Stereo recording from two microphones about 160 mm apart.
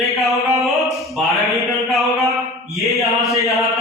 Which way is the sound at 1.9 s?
Centre (ahead or behind).